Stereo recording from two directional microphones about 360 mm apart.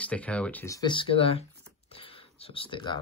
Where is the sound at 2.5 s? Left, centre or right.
Centre.